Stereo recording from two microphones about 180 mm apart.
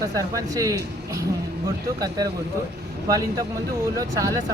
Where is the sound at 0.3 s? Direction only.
20° right (ahead or behind).